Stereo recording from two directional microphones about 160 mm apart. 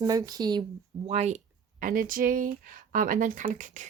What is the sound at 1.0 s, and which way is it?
Speech, 45° right (ahead or behind).